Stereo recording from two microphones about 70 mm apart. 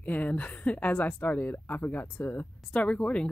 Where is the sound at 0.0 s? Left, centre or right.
Left.